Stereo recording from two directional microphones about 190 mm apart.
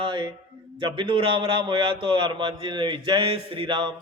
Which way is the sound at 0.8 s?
25° right (ahead or behind).